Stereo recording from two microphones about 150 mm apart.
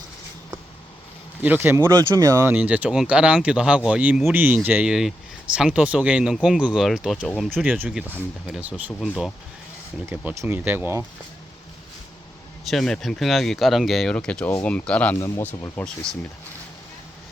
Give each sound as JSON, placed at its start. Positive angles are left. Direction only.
{"t": 1.4, "sound": "speech", "side_deg": -10}
{"t": 2.5, "sound": "speech", "side_deg": -10}
{"t": 7.7, "sound": "speech", "side_deg": -10}
{"t": 10.1, "sound": "speech", "side_deg": -15}
{"t": 12.6, "sound": "speech", "side_deg": 0}